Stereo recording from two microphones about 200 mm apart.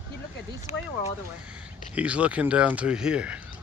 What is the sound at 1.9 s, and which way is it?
Speech, 5° right (ahead or behind).